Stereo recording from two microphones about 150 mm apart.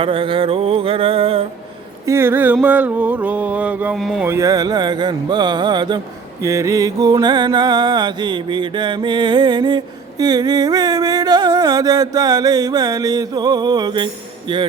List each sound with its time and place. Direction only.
0.0 s mantra: 35° right (ahead or behind)
2.0 s mantra: 15° right (ahead or behind)
3.9 s speech: centre (ahead or behind)
4.2 s music: 20° right (ahead or behind)
6.4 s music: 20° right (ahead or behind)